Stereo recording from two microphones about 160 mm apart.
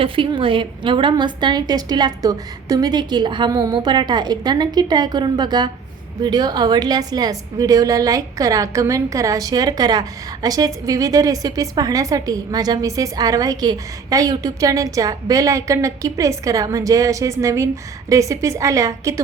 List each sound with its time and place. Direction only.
0.0 s a woman's voice: 30° right (ahead or behind)